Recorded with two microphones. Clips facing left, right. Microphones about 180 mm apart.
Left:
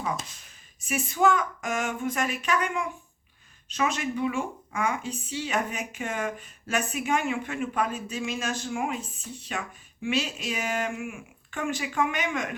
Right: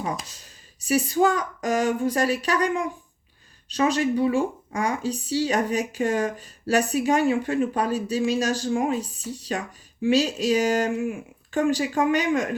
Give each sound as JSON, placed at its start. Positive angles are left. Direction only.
{"t": 0.4, "sound": "speech", "side_deg": -35}